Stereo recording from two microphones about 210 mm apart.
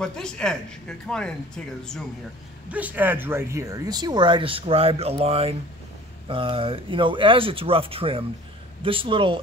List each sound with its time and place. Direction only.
0.0 s speech: 5° left (ahead or behind)
2.7 s speech: 10° right (ahead or behind); by 9.4 s 25° right (ahead or behind)